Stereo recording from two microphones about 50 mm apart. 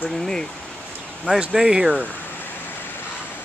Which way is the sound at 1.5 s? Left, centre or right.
Centre.